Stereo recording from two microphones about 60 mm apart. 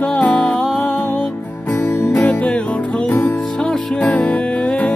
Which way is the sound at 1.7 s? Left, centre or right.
Left.